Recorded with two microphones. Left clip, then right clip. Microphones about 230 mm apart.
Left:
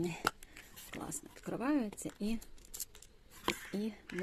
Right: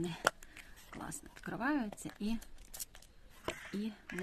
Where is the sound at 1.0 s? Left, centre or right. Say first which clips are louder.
Right 1 dB; centre.